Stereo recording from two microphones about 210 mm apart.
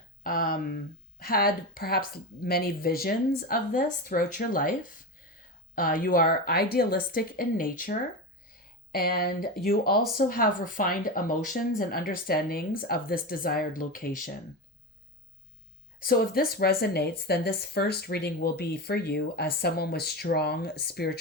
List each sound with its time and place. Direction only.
0.2 s a woman's voice: 45° left (ahead or behind)
16.0 s speech: 45° left (ahead or behind)